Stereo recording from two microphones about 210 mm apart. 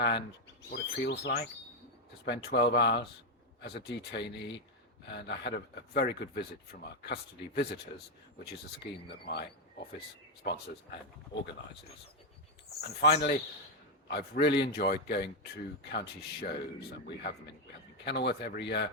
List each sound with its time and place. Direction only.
0.0 s bird: 55° left (ahead or behind)
0.7 s speech: 55° left (ahead or behind)
9.2 s speech: 50° left (ahead or behind)
11.3 s speech: 20° left (ahead or behind)
13.0 s speech: 45° left (ahead or behind)